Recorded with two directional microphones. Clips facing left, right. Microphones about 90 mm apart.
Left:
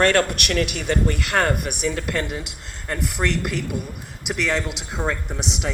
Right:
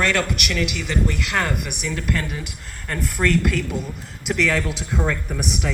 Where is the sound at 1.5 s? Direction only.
30° left (ahead or behind).